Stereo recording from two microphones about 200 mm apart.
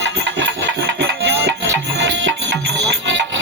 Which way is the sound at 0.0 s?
65° right (ahead or behind).